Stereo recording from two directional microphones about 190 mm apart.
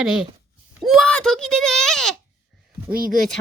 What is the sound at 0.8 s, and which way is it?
A child's voice, centre (ahead or behind).